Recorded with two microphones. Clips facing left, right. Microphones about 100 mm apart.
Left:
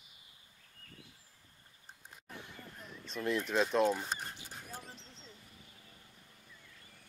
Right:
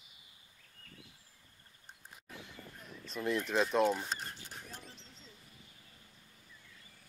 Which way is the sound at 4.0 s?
15° left (ahead or behind).